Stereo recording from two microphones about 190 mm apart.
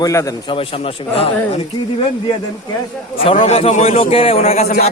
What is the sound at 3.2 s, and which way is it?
A man's voice, 30° left (ahead or behind).